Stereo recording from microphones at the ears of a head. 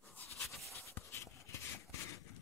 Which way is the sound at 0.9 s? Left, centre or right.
Left.